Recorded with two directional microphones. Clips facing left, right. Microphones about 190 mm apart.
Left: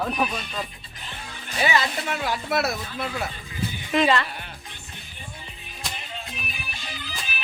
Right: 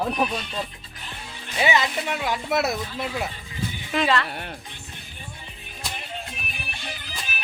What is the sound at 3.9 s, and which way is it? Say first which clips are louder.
Speech: left 2 dB; centre (ahead or behind).